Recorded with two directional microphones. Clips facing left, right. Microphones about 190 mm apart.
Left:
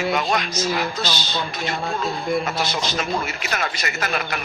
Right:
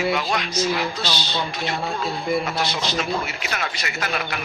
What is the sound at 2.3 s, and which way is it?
Speech, centre (ahead or behind).